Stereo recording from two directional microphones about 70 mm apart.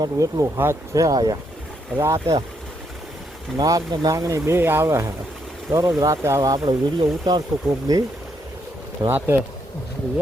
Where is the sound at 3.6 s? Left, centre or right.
Right.